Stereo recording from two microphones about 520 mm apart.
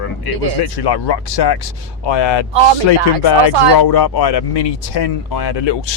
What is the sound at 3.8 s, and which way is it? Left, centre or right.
Speech, left.